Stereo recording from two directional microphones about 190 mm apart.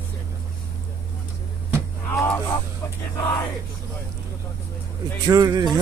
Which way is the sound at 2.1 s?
15° left (ahead or behind).